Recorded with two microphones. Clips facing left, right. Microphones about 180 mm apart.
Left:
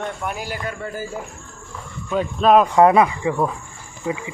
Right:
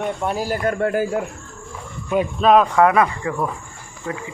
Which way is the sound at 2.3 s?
Centre (ahead or behind).